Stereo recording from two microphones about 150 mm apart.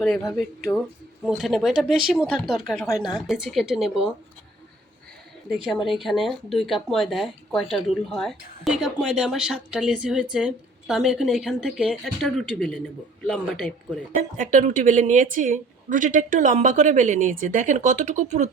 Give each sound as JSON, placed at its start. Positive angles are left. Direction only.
{"t": 1.4, "sound": "speech", "side_deg": 0}
{"t": 2.7, "sound": "speech", "side_deg": 15}
{"t": 3.2, "sound": "speech", "side_deg": -5}
{"t": 5.5, "sound": "speech", "side_deg": 0}
{"t": 14.3, "sound": "a woman's voice", "side_deg": -60}